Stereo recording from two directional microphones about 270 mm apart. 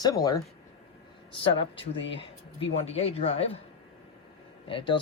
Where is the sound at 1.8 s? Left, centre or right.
Left.